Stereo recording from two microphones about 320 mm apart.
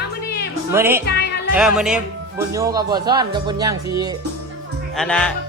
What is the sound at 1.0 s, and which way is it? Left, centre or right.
Music, left.